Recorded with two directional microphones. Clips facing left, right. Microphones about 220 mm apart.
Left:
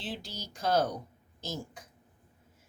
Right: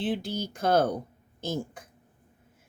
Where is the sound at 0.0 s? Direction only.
55° right (ahead or behind).